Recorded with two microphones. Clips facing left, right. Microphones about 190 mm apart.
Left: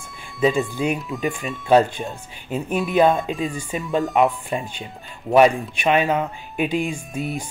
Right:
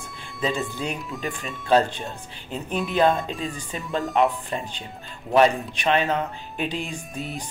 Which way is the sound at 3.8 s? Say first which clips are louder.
Left 4 dB; centre (ahead or behind).